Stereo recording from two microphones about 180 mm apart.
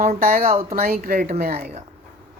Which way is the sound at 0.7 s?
55° right (ahead or behind).